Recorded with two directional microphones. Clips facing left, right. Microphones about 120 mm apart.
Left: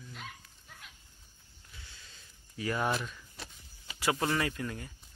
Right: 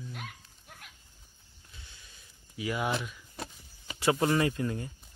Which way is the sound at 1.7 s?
20° right (ahead or behind).